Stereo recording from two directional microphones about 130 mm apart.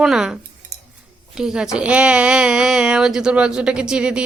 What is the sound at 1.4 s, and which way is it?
A woman's voice, 5° right (ahead or behind).